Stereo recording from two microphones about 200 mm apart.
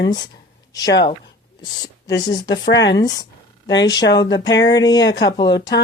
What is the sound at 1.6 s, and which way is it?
Speech, 20° left (ahead or behind).